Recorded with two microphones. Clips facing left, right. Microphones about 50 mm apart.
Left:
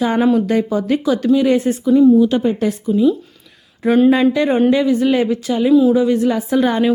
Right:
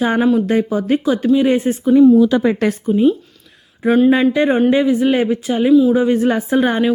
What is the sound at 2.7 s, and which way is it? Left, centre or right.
Speech, right.